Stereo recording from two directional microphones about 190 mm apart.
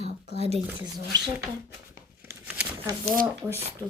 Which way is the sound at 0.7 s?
20° right (ahead or behind).